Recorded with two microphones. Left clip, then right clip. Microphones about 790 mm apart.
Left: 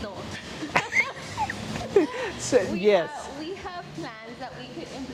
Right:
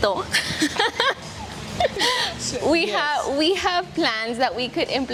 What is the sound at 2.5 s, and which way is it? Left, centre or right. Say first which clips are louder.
Speech: left 3 dB; left.